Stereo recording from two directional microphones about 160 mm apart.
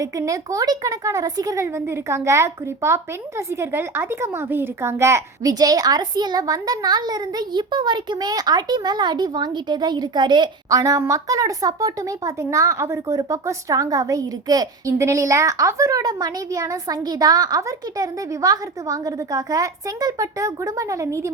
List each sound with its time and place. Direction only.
0.0 s speech: 20° right (ahead or behind)